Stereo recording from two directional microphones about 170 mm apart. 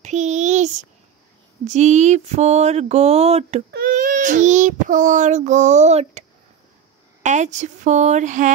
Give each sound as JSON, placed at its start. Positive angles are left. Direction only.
{"t": 0.0, "sound": "a sound", "side_deg": -45}
{"t": 1.6, "sound": "speech", "side_deg": -45}
{"t": 3.7, "sound": "speech", "side_deg": -55}
{"t": 7.2, "sound": "speech", "side_deg": -45}